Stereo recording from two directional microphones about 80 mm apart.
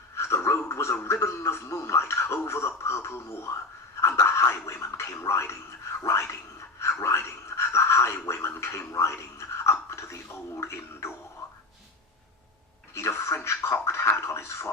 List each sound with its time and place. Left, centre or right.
0.2 s a man's voice: left
6.7 s gargling: left
10.6 s speech: left
12.9 s speech: left